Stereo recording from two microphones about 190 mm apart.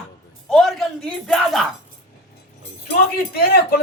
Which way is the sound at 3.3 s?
50° left (ahead or behind).